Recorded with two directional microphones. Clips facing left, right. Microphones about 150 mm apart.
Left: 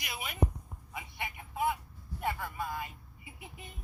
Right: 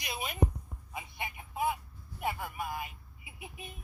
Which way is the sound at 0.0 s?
25° right (ahead or behind).